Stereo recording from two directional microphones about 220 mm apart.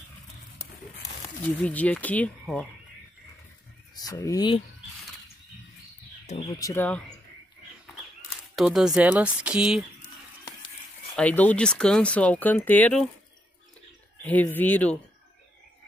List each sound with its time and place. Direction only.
1.6 s speech: 5° left (ahead or behind)
4.0 s speech: 15° left (ahead or behind)
6.2 s speech: 30° left (ahead or behind)
6.6 s speech: 10° left (ahead or behind)
8.5 s speech: centre (ahead or behind)
11.1 s speech: 5° left (ahead or behind)
14.2 s speech: 10° left (ahead or behind)